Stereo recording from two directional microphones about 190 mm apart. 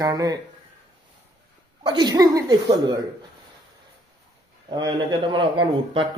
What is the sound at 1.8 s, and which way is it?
Speech, 20° right (ahead or behind).